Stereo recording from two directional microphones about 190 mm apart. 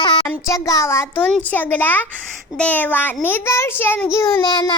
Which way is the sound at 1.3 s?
10° left (ahead or behind).